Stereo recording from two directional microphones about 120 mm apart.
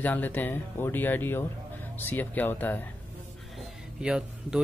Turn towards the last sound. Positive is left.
turn(degrees=-5)  # may be behind; listen again after turning